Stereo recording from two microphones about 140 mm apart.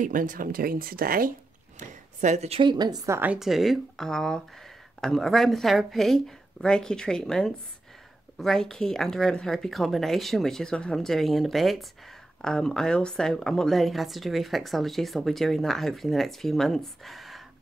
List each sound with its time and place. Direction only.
0.0 s speech: 75° right (ahead or behind); by 1.3 s 90° right
1.8 s a sound: 55° right (ahead or behind)
2.6 s a woman's voice: 30° right (ahead or behind)
3.2 s a woman's voice: 5° right (ahead or behind)